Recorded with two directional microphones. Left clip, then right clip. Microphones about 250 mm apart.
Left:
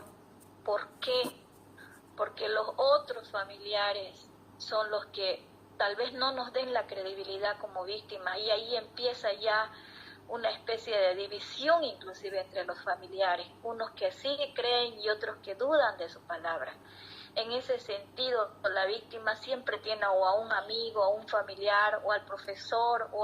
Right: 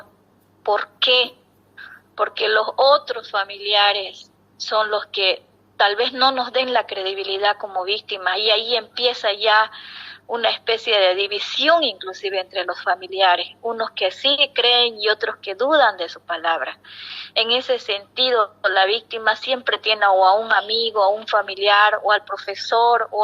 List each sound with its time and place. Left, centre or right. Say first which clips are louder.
0.6 s a woman's voice: right 14 dB; right